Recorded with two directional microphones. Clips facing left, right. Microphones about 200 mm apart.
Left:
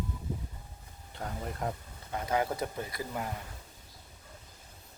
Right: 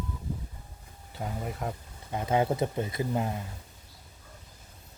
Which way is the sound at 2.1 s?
25° right (ahead or behind).